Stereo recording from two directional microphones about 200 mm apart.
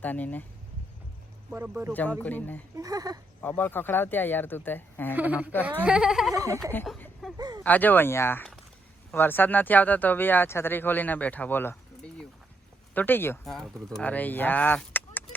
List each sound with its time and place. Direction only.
0.0 s speech: 10° left (ahead or behind)
1.5 s speech: 5° right (ahead or behind)
1.9 s speech: 10° left (ahead or behind)
2.7 s speech: 20° right (ahead or behind)
3.6 s speech: 10° left (ahead or behind)
5.1 s speech: 10° right (ahead or behind)
6.3 s speech: 15° right (ahead or behind)
6.6 s speech: 10° left (ahead or behind)
6.8 s a sound: centre (ahead or behind)
7.3 s a sound: 20° right (ahead or behind)
7.6 s speech: 10° left (ahead or behind)